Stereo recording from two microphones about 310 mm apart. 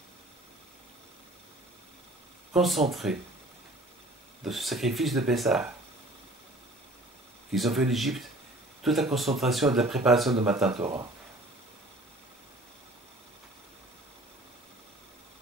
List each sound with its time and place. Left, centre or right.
2.5 s speech: centre
4.5 s speech: centre
7.5 s speech: centre
10.7 s speech: centre